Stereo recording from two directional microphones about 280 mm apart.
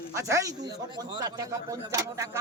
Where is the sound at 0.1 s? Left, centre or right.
Centre.